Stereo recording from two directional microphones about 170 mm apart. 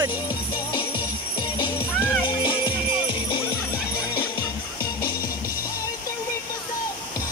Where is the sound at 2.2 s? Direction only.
30° left (ahead or behind).